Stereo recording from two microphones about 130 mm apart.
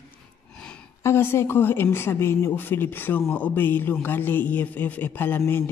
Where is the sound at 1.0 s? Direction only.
20° left (ahead or behind).